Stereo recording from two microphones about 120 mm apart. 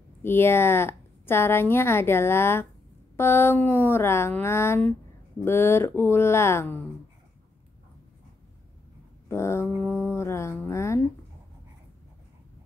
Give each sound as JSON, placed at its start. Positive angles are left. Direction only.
{"t": 0.2, "sound": "a woman's voice", "side_deg": 20}
{"t": 9.3, "sound": "a woman's voice", "side_deg": 20}